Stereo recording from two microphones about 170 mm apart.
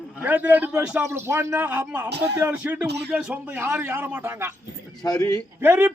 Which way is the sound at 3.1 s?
5° right (ahead or behind).